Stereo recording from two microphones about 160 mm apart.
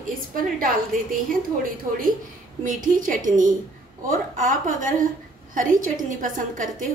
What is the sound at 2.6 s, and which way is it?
A woman's voice, 55° right (ahead or behind).